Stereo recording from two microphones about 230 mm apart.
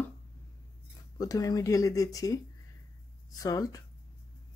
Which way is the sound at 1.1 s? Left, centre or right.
Centre.